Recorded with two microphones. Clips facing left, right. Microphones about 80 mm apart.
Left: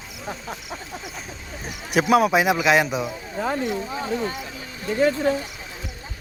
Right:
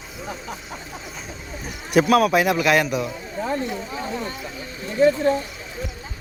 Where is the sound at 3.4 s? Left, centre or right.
Left.